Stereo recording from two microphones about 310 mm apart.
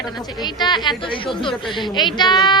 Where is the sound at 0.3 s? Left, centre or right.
Centre.